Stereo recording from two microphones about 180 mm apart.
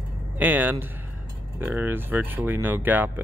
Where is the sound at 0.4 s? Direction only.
10° right (ahead or behind).